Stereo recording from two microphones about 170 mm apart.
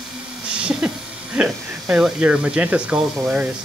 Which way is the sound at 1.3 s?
5° right (ahead or behind).